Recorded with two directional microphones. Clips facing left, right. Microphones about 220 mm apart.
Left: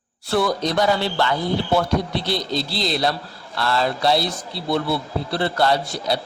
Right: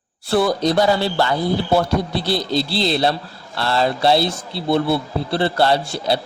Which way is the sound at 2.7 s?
30° right (ahead or behind).